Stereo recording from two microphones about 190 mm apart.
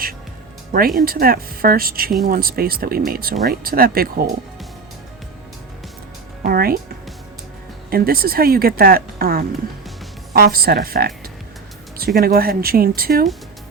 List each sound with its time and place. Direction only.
0.7 s speech: 50° right (ahead or behind)
6.4 s speech: 50° right (ahead or behind)
7.9 s speech: 50° right (ahead or behind)